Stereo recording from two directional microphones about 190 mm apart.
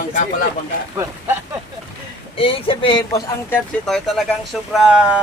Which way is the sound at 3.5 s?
Centre (ahead or behind).